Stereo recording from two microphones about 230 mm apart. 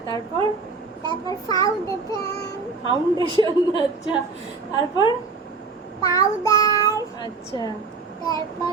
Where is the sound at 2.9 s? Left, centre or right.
Centre.